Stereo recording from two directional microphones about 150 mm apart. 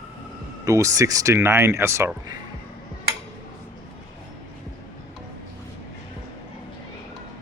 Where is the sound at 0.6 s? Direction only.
20° right (ahead or behind).